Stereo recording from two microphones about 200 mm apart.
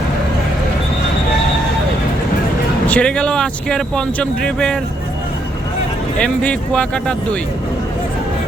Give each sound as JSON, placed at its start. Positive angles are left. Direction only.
{"t": 2.8, "sound": "speech", "side_deg": 5}
{"t": 6.1, "sound": "speech", "side_deg": 5}